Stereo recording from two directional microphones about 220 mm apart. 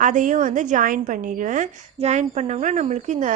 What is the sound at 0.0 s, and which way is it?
A woman's voice, 35° right (ahead or behind).